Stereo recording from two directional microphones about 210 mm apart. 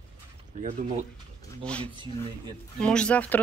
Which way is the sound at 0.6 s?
30° right (ahead or behind).